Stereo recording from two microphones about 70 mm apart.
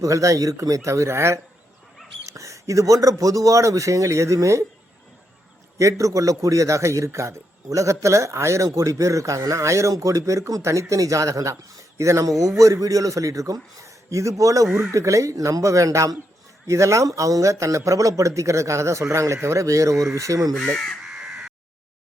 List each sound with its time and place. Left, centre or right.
0.0 s a man's voice: right
5.7 s a man's voice: right
21.0 s caw: centre